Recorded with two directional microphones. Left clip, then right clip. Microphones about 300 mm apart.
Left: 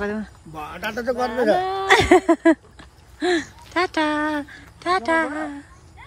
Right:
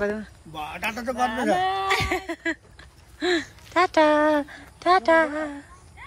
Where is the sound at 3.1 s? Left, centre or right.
Centre.